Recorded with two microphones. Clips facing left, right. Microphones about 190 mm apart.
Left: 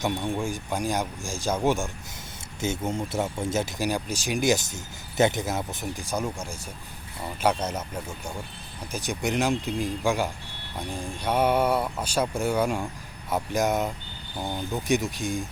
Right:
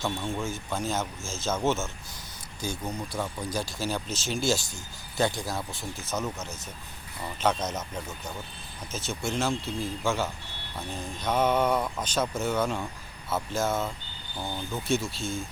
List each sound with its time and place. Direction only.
0.0 s speech: 15° left (ahead or behind)
2.6 s speech: 25° left (ahead or behind)
8.9 s speech: 15° left (ahead or behind)